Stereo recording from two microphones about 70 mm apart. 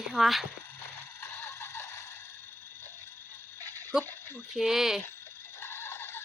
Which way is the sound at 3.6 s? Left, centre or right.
Right.